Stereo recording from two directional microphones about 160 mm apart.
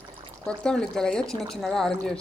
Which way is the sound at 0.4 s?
5° left (ahead or behind).